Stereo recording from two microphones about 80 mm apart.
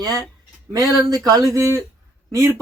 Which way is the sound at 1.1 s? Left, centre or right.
Right.